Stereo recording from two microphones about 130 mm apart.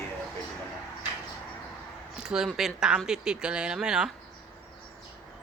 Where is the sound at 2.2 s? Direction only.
5° right (ahead or behind).